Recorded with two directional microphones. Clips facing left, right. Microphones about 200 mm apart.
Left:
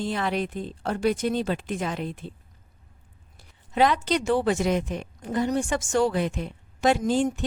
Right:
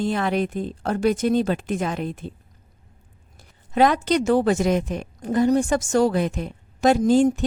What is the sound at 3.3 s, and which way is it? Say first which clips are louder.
Speech: right 3 dB; 45° right (ahead or behind).